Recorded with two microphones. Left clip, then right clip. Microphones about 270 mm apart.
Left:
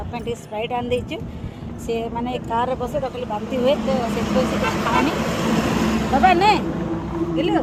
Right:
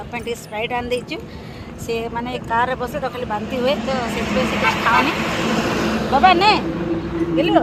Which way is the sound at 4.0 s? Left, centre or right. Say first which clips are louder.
Right 1 dB; left.